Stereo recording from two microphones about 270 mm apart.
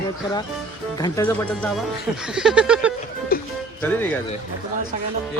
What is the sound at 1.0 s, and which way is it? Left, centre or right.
Speech, centre.